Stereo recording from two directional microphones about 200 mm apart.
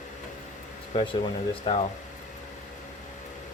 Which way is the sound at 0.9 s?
25° left (ahead or behind).